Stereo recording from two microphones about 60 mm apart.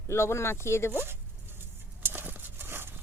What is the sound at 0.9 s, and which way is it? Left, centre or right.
Zipper, right.